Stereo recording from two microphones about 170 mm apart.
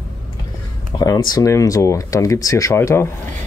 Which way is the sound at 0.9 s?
20° left (ahead or behind).